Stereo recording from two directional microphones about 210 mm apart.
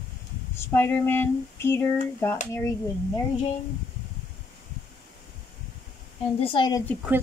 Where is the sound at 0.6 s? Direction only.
10° left (ahead or behind).